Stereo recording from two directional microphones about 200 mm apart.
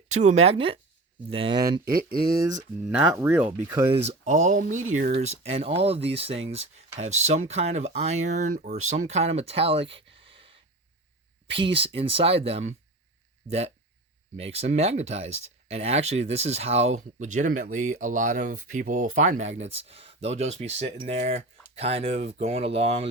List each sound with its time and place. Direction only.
0.2 s speech: 35° right (ahead or behind)
1.8 s speech: 45° right (ahead or behind)
2.8 s speech: 5° right (ahead or behind)
3.8 s speech: 30° right (ahead or behind)
4.9 s speech: 50° right (ahead or behind)
5.3 s speech: 30° right (ahead or behind)